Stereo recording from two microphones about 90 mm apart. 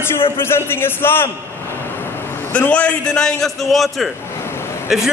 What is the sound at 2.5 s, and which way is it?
A man's voice, 15° left (ahead or behind).